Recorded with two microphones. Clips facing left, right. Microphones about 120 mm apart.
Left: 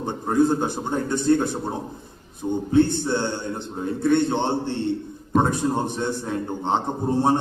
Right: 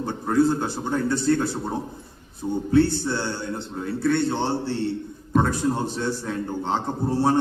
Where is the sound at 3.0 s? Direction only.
20° left (ahead or behind).